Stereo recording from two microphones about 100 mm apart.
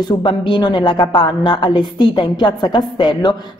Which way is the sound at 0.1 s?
50° left (ahead or behind).